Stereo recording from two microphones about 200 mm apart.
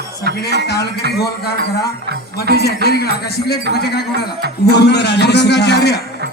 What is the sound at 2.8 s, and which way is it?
A man's voice, 50° left (ahead or behind).